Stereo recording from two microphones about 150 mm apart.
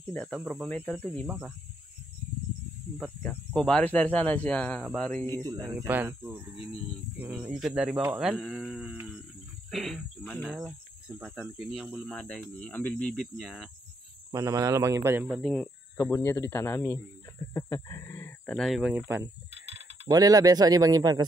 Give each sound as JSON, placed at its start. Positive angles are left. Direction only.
{"t": 0.1, "sound": "speech", "side_deg": 5}
{"t": 3.2, "sound": "speech", "side_deg": 5}
{"t": 5.9, "sound": "speech", "side_deg": -15}
{"t": 8.4, "sound": "speech", "side_deg": 5}
{"t": 11.1, "sound": "speech", "side_deg": -10}
{"t": 14.3, "sound": "speech", "side_deg": -20}
{"t": 15.2, "sound": "speech", "side_deg": 0}
{"t": 16.0, "sound": "speech", "side_deg": 15}
{"t": 18.6, "sound": "speech", "side_deg": 0}
{"t": 18.9, "sound": "speech", "side_deg": -10}
{"t": 19.5, "sound": "mechanisms", "side_deg": -45}
{"t": 20.1, "sound": "speech", "side_deg": -25}